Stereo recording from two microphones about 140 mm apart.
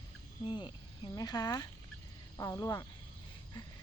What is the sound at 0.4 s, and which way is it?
Speech, 35° left (ahead or behind).